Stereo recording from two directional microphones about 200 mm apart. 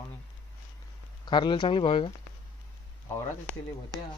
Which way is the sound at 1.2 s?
20° left (ahead or behind).